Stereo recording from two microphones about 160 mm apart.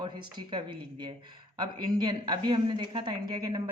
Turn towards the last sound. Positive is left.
turn(degrees=-25)  # may be behind; listen again after turning